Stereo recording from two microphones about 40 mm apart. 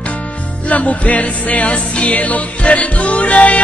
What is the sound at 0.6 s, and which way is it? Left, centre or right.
Music, left.